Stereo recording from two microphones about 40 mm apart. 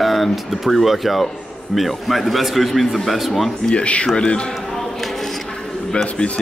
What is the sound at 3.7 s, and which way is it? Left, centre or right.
Speech, left.